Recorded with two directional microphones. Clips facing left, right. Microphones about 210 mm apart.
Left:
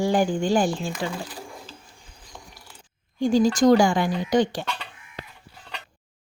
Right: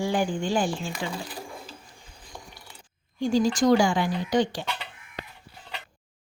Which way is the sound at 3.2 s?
50° left (ahead or behind).